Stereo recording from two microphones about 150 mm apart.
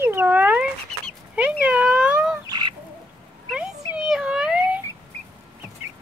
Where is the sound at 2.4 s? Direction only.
30° right (ahead or behind).